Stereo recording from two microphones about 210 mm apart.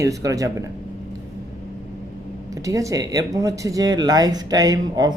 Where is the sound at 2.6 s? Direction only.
15° right (ahead or behind).